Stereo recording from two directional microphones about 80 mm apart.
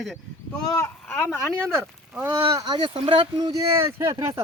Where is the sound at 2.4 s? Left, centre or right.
Right.